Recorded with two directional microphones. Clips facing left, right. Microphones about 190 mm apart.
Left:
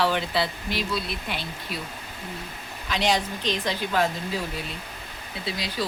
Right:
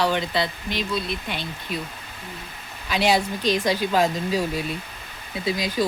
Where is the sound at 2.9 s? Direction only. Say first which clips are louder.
Right 4 dB; 10° right (ahead or behind).